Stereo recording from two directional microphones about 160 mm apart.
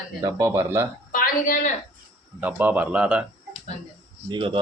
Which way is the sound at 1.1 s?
60° left (ahead or behind).